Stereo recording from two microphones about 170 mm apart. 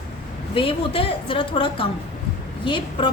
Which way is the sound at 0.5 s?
30° left (ahead or behind).